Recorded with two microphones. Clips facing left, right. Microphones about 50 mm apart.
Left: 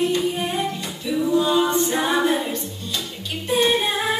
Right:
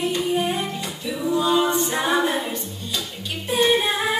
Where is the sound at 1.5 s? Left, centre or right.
Centre.